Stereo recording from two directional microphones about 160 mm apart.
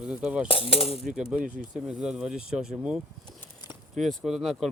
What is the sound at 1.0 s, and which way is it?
Speech, 5° right (ahead or behind).